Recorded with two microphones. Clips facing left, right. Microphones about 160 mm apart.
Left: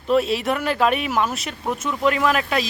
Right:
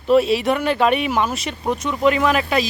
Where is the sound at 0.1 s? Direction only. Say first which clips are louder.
Right 4 dB; centre (ahead or behind).